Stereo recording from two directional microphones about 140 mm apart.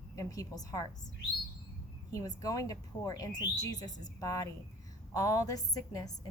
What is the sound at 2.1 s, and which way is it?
Speech, 25° left (ahead or behind).